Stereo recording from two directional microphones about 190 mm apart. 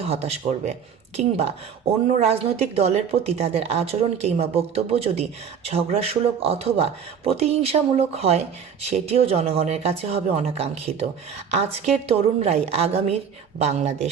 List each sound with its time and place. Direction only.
0.0 s speech: 30° right (ahead or behind)